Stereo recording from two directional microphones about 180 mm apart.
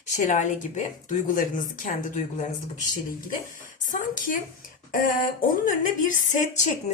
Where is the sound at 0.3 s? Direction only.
40° left (ahead or behind).